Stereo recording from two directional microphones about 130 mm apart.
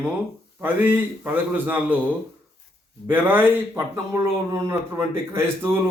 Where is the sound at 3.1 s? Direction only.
15° right (ahead or behind).